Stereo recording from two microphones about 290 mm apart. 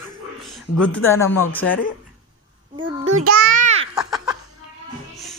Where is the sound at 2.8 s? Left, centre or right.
Right.